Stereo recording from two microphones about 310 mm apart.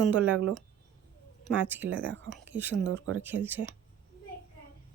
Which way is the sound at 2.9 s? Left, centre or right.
Right.